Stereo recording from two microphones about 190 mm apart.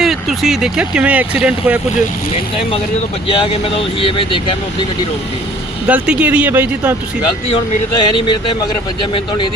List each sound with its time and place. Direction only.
0.0 s speech: centre (ahead or behind)
3.2 s speech: 30° left (ahead or behind)
5.9 s speech: 5° right (ahead or behind)
7.2 s speech: 25° left (ahead or behind)